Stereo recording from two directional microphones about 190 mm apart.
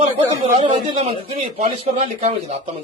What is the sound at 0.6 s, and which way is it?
A man's voice, 25° right (ahead or behind).